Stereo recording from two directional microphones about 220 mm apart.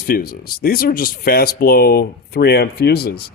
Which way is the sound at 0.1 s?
40° left (ahead or behind).